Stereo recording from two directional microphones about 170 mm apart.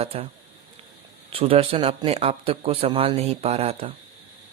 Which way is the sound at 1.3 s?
35° right (ahead or behind).